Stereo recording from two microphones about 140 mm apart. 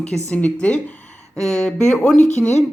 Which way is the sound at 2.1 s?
55° left (ahead or behind).